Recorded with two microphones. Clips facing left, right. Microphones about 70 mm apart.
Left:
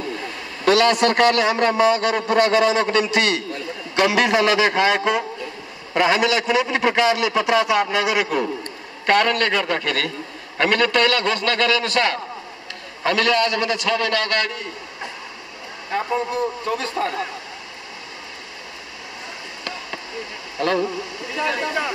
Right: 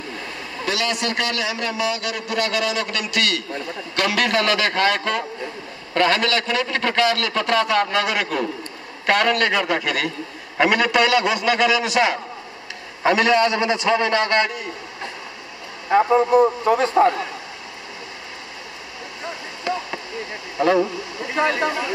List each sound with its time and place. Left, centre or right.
0.7 s a man's voice: left; by 14.6 s right
15.9 s a man's voice: right
19.7 s a sound: centre
20.6 s a man's voice: centre
21.4 s speech: right